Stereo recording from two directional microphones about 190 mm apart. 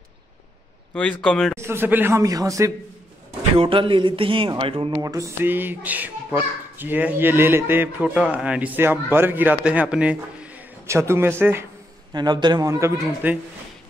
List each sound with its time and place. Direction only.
1.2 s speech: 5° left (ahead or behind)
1.6 s speech: 10° right (ahead or behind)
3.5 s a man's voice: 25° right (ahead or behind); by 13.4 s 10° right (ahead or behind)